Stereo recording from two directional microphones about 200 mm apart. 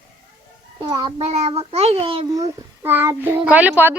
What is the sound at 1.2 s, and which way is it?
A child's voice, 30° right (ahead or behind).